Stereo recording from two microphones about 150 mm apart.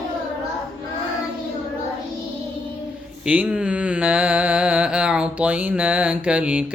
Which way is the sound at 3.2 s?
10° right (ahead or behind).